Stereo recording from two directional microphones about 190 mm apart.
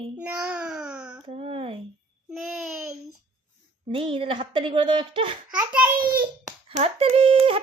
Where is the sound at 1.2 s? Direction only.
30° right (ahead or behind).